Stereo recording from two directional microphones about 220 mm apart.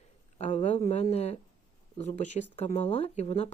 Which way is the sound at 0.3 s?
30° left (ahead or behind).